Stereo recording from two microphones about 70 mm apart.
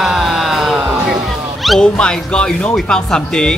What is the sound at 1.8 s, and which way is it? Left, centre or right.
Speech, centre.